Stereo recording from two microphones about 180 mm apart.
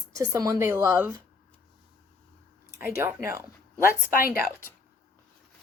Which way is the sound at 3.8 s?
55° left (ahead or behind).